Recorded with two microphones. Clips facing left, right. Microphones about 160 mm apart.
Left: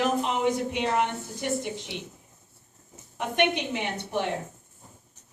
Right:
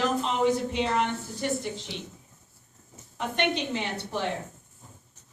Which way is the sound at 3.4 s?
15° left (ahead or behind).